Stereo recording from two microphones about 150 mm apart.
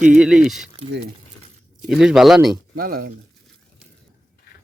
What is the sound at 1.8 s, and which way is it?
Speech, 5° right (ahead or behind).